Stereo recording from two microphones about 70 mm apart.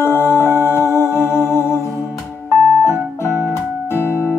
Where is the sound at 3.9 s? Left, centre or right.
Left.